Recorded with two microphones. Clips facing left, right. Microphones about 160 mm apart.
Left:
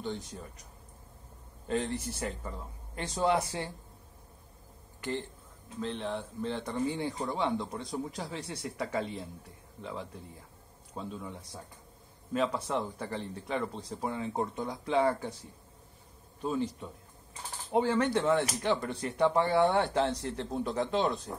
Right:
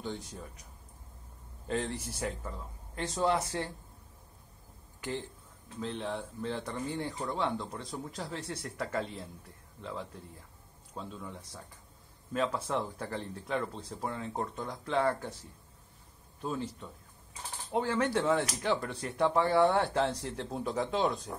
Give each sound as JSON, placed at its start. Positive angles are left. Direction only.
{"t": 0.0, "sound": "speech", "side_deg": -5}
{"t": 1.7, "sound": "speech", "side_deg": 0}
{"t": 5.8, "sound": "speech", "side_deg": 0}
{"t": 12.6, "sound": "speech", "side_deg": 5}
{"t": 16.4, "sound": "speech", "side_deg": 0}